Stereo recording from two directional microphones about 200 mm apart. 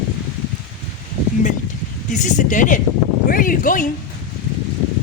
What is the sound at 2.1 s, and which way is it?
A woman's voice, 40° left (ahead or behind).